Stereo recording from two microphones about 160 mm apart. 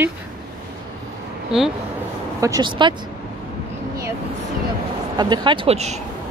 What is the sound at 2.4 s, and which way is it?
Speech, 25° right (ahead or behind).